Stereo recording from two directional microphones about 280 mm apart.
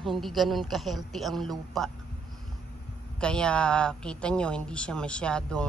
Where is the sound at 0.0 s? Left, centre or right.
Centre.